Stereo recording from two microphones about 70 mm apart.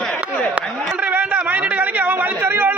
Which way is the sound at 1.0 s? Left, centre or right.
Right.